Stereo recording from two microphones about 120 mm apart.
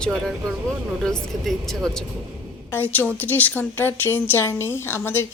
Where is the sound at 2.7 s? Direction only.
15° left (ahead or behind).